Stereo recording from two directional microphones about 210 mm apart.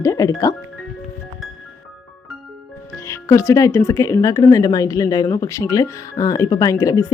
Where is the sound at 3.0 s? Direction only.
15° left (ahead or behind).